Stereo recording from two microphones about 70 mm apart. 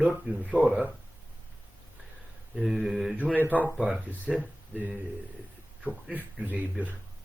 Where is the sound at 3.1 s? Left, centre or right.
Right.